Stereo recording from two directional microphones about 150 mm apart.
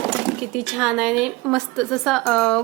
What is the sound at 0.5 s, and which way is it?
Speech, 5° right (ahead or behind).